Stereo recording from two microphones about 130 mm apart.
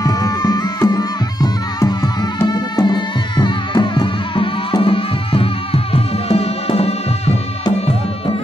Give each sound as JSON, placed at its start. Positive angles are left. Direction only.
{"t": 0.0, "sound": "music", "side_deg": 30}